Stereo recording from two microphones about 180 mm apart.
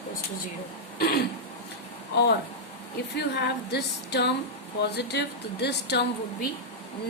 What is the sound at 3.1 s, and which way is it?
Speech, 70° left (ahead or behind).